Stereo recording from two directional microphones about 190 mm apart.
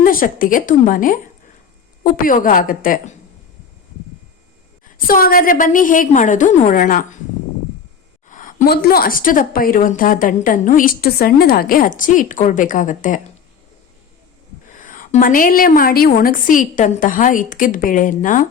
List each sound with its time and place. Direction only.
0.0 s a woman's voice: 50° left (ahead or behind)
4.9 s a woman's voice: 50° left (ahead or behind)
8.3 s a woman's voice: 45° left (ahead or behind)
14.7 s a woman's voice: 45° left (ahead or behind)